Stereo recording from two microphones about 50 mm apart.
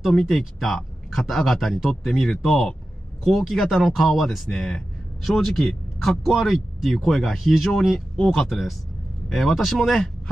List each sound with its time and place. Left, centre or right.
0.2 s a man's voice: centre